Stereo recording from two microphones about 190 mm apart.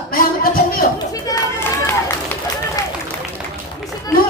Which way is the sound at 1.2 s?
15° left (ahead or behind).